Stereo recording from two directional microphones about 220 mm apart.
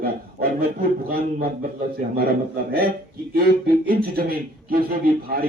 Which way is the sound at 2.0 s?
40° right (ahead or behind).